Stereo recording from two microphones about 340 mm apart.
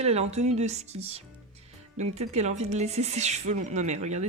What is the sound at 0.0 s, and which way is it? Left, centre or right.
Speech, centre.